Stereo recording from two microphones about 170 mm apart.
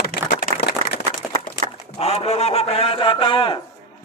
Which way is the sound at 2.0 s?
40° left (ahead or behind).